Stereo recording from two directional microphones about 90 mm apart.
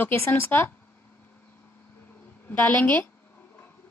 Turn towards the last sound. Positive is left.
turn(degrees=20)  # may be behind; listen again after turning